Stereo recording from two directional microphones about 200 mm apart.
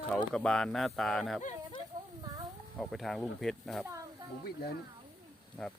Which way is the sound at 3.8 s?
15° right (ahead or behind).